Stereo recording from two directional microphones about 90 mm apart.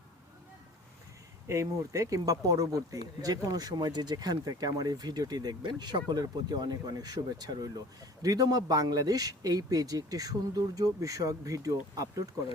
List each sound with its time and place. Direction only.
1.5 s speech: 35° right (ahead or behind)